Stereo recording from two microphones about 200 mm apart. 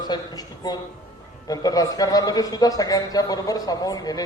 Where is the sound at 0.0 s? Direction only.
20° left (ahead or behind).